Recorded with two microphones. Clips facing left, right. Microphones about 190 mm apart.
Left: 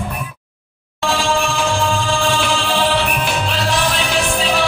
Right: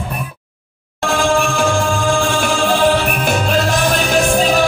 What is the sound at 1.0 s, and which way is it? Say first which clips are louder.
Music: right 3 dB; 50° right (ahead or behind).